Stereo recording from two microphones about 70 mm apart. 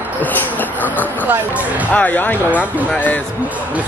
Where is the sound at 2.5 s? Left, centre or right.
Right.